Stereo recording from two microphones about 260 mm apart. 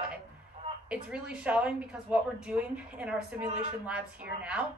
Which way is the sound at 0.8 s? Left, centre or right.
Centre.